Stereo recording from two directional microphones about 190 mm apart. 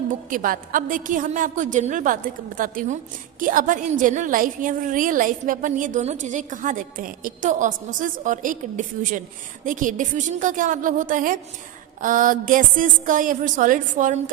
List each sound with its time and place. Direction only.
0.1 s a woman's voice: 45° right (ahead or behind)